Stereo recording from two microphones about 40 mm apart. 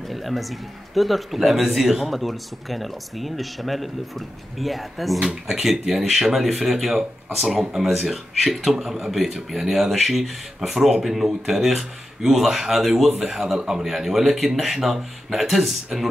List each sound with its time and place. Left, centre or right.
0.1 s speech: centre
5.2 s speech: right
5.6 s speech: centre